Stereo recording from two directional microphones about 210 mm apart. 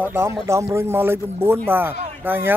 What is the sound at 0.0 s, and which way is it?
Speech, 10° right (ahead or behind).